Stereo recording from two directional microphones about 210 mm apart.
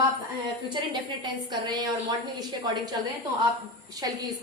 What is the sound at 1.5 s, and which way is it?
A woman's voice, 20° right (ahead or behind).